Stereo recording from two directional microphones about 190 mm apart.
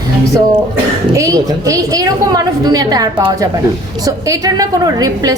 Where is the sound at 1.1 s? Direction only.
15° right (ahead or behind).